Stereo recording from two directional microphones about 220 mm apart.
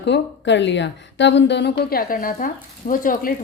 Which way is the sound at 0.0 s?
50° left (ahead or behind).